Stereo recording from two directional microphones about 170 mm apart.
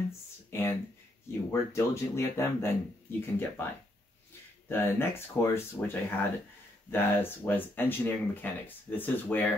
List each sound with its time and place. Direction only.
0.5 s speech: 15° left (ahead or behind)
4.6 s speech: 15° left (ahead or behind)